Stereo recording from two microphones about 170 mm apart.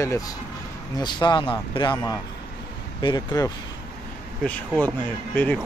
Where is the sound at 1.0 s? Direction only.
25° left (ahead or behind).